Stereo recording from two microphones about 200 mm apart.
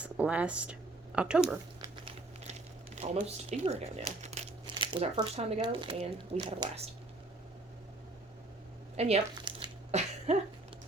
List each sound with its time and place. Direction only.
0.0 s speech: 5° right (ahead or behind)
2.4 s speech: 35° right (ahead or behind)
9.0 s speech: 30° right (ahead or behind)
9.9 s a sound: 35° right (ahead or behind)